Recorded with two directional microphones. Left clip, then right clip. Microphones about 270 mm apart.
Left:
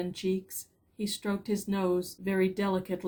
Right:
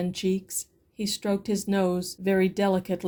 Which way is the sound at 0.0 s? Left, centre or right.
Right.